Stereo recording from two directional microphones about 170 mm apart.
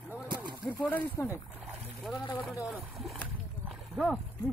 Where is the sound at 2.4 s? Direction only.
Centre (ahead or behind).